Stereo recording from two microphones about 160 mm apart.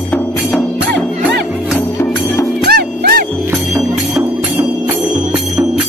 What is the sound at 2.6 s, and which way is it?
Music, 70° right (ahead or behind).